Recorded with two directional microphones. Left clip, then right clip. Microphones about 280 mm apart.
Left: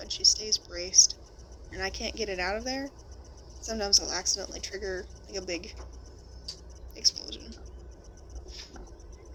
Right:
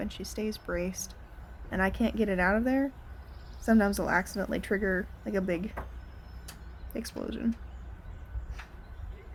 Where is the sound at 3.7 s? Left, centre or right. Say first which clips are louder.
Right 1 dB; centre.